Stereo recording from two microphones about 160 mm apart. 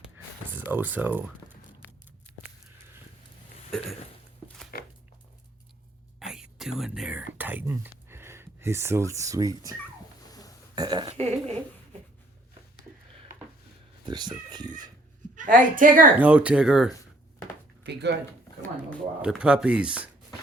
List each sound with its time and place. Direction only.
0.5 s speech: 10° right (ahead or behind)
3.7 s a sound: centre (ahead or behind)
6.1 s whispering: 5° right (ahead or behind)
7.3 s a sound: 10° right (ahead or behind)
10.2 s burping: 25° left (ahead or behind)
10.8 s speech: 25° right (ahead or behind)
11.1 s speech: 40° right (ahead or behind)
14.1 s speech: 25° right (ahead or behind)
15.4 s a woman's voice: 55° right (ahead or behind)
16.1 s speech: 10° right (ahead or behind)
17.8 s speech: 90° right
19.2 s speech: 5° right (ahead or behind)